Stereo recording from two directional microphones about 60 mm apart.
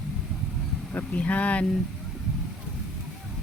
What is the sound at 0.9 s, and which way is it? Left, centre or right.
Speech, left.